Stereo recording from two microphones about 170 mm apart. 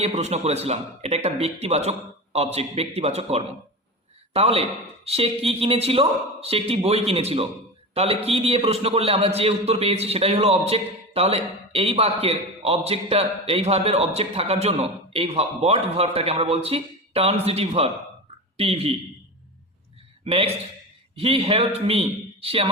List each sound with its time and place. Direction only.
0.0 s a man's voice: 40° right (ahead or behind)
20.2 s a man's voice: 35° right (ahead or behind)